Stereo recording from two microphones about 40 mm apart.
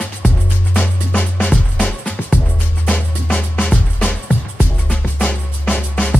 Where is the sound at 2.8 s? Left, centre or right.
Left.